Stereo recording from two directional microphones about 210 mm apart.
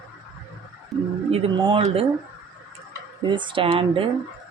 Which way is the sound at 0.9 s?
Centre (ahead or behind).